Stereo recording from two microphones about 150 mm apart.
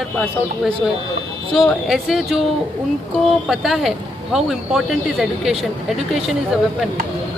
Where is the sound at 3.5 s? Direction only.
Centre (ahead or behind).